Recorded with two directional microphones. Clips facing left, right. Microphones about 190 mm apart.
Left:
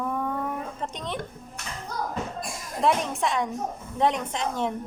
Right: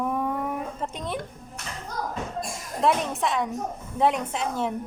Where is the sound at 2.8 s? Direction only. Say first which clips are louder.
Even; centre (ahead or behind).